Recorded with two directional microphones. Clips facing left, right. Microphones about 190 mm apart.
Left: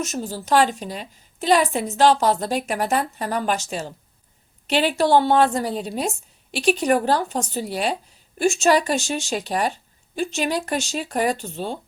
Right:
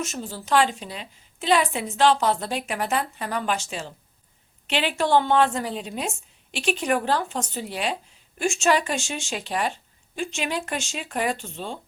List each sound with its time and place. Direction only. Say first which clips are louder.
0.0 s a woman's voice: left 4 dB; 40° left (ahead or behind)